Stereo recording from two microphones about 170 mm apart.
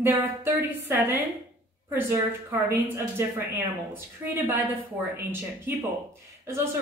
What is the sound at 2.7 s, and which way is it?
Speech, 15° right (ahead or behind).